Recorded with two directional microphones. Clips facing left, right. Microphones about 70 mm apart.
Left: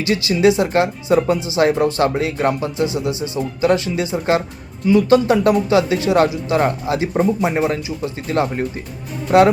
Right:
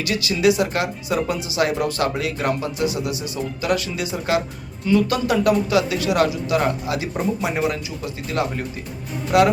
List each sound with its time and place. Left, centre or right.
0.0 s speech: left